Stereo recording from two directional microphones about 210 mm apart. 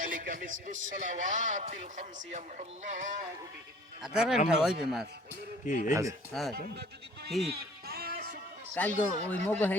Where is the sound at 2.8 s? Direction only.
35° right (ahead or behind).